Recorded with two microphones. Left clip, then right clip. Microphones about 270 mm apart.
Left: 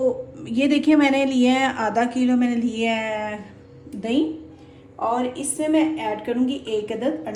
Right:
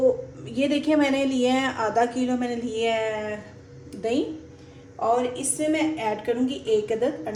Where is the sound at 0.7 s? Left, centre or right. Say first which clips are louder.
Left 4 dB; left.